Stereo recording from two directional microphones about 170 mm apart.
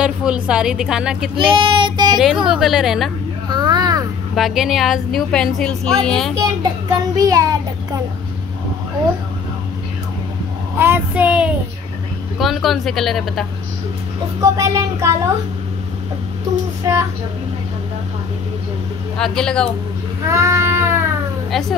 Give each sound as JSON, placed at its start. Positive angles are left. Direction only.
{"t": 0.0, "sound": "a woman's voice", "side_deg": -5}
{"t": 1.3, "sound": "child singing", "side_deg": -30}
{"t": 2.1, "sound": "a woman's voice", "side_deg": -5}
{"t": 3.4, "sound": "a sound", "side_deg": -25}
{"t": 4.4, "sound": "a woman's voice", "side_deg": 0}
{"t": 6.3, "sound": "a child's voice", "side_deg": -20}
{"t": 10.8, "sound": "child singing", "side_deg": -10}
{"t": 12.4, "sound": "a woman's voice", "side_deg": 0}
{"t": 14.4, "sound": "child singing", "side_deg": -20}
{"t": 19.1, "sound": "a woman's voice", "side_deg": 5}
{"t": 20.2, "sound": "a sound", "side_deg": -20}
{"t": 21.5, "sound": "a woman's voice", "side_deg": 0}